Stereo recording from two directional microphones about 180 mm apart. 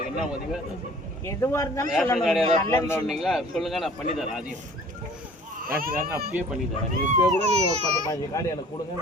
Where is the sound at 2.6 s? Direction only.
15° left (ahead or behind).